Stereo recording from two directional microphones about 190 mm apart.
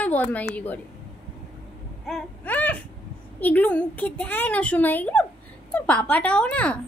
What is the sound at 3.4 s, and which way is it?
A woman's voice, 10° left (ahead or behind).